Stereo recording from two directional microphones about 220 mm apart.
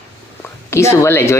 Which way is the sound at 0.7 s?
15° left (ahead or behind).